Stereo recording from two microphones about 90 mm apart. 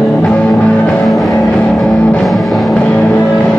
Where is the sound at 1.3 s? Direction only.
15° left (ahead or behind).